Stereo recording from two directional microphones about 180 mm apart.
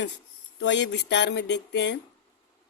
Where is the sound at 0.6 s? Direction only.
80° left.